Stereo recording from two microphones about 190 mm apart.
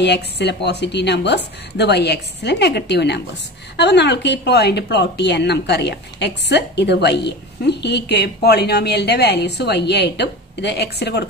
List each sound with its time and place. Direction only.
0.0 s a woman's voice: 60° left (ahead or behind)